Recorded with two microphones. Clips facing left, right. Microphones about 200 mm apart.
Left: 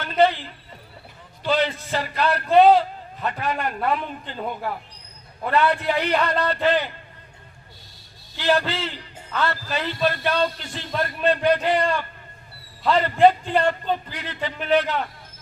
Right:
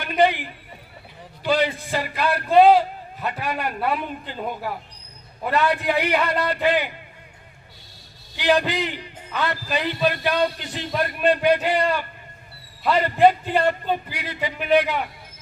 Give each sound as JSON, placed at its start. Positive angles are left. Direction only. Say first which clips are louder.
{"t": 0.0, "sound": "a man's voice", "louder": "even", "side_deg": -15}
{"t": 8.4, "sound": "a man's voice", "louder": "right 2 dB", "side_deg": -15}